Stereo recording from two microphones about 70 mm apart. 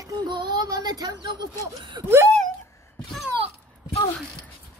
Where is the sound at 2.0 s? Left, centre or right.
Right.